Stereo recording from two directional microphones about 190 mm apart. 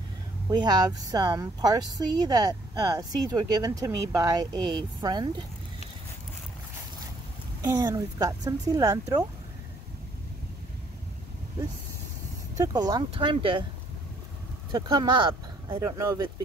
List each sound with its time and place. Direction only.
0.5 s speech: 20° right (ahead or behind)
7.6 s speech: 20° right (ahead or behind)
12.5 s speech: 20° right (ahead or behind)
14.7 s speech: 25° right (ahead or behind)